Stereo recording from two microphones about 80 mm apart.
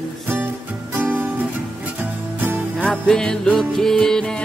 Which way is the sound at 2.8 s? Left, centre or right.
Centre.